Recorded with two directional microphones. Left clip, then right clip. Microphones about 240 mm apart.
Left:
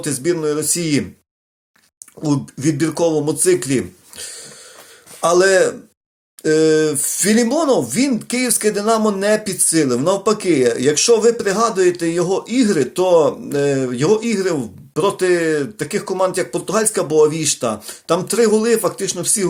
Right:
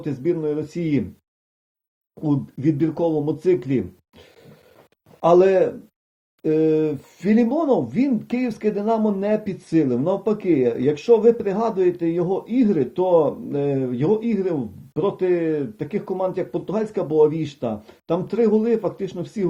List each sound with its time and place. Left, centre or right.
0.0 s speech: centre
2.2 s speech: centre
5.2 s speech: centre